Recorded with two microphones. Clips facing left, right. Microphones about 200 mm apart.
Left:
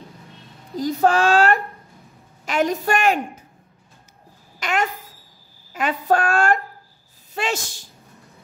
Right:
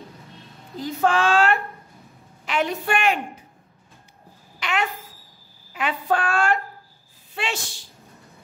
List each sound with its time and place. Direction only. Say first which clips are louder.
0.7 s a woman's voice: left 3 dB; 40° left (ahead or behind)
4.6 s a child's voice: left 3 dB; 45° left (ahead or behind)